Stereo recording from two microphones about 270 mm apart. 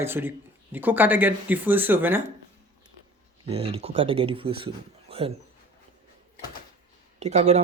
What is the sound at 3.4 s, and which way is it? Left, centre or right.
Speech, right.